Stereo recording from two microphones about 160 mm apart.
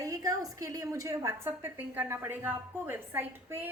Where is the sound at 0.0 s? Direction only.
20° right (ahead or behind).